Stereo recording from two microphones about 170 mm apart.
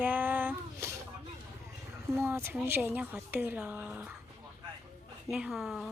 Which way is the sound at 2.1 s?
10° right (ahead or behind).